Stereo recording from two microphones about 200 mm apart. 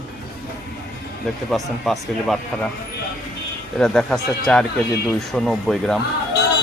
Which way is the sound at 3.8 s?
5° left (ahead or behind).